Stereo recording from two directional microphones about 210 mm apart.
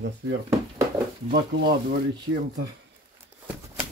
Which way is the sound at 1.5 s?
65° right (ahead or behind).